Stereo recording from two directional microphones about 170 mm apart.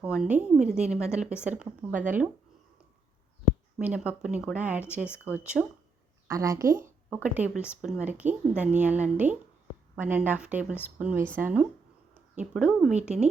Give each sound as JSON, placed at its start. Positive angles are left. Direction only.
{"t": 0.0, "sound": "a woman's voice", "side_deg": -5}
{"t": 3.4, "sound": "speech", "side_deg": -10}
{"t": 6.2, "sound": "speech", "side_deg": -20}